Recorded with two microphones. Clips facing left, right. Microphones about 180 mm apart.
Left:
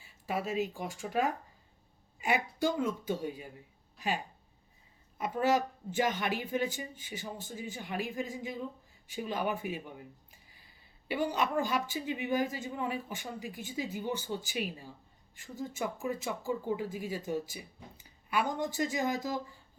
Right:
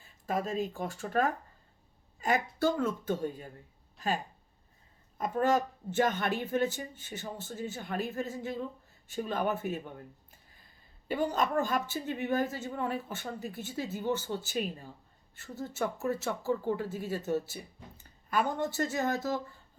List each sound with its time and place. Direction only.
0.3 s speech: 5° left (ahead or behind)
2.3 s speech: 10° left (ahead or behind)
5.4 s speech: 10° left (ahead or behind)
9.9 s a sound: 10° left (ahead or behind)
11.1 s a woman's voice: 45° right (ahead or behind)
11.5 s speech: 10° left (ahead or behind)